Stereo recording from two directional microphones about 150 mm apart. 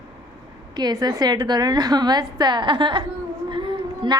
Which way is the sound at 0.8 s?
30° right (ahead or behind).